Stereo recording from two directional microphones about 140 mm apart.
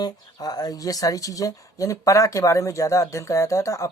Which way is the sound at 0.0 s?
30° left (ahead or behind).